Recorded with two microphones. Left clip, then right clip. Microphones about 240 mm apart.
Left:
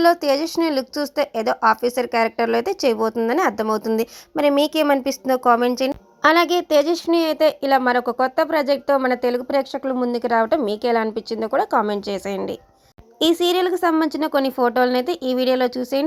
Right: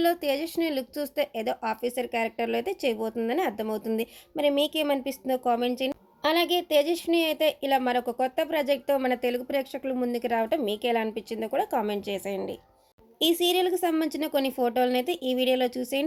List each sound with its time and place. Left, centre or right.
0.0 s a woman's voice: centre
7.3 s speech: left
10.5 s speech: centre
10.8 s speech: left
11.1 s a woman's voice: centre
14.9 s speech: left
15.5 s speech: centre